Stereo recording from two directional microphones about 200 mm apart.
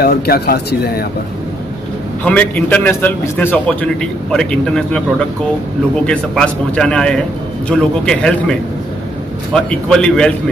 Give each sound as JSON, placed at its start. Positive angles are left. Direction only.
{"t": 0.0, "sound": "speech", "side_deg": 50}
{"t": 2.2, "sound": "a man's voice", "side_deg": 5}
{"t": 6.0, "sound": "a man's voice", "side_deg": 5}